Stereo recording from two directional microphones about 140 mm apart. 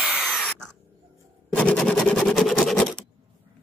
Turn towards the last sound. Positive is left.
turn(degrees=5)  # may be behind; listen again after turning